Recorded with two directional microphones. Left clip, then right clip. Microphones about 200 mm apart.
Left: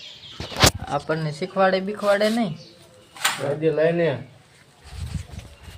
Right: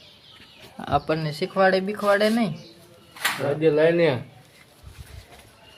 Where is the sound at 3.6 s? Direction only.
45° right (ahead or behind).